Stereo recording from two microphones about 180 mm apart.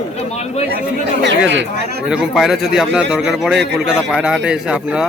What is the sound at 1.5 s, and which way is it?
Speech, 90° right.